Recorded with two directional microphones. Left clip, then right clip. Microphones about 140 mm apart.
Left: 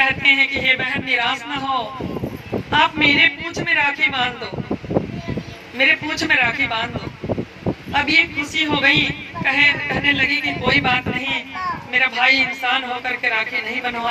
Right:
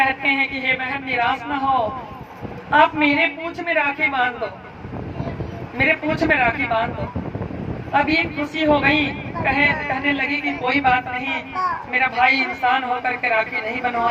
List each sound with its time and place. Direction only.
0.0 s a woman's voice: 10° left (ahead or behind)
2.8 s a woman's voice: 20° left (ahead or behind)
5.7 s a woman's voice: 15° left (ahead or behind)
7.9 s a woman's voice: 10° left (ahead or behind)